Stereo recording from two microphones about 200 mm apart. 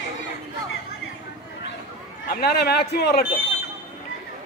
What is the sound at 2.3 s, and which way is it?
Speech, 50° left (ahead or behind).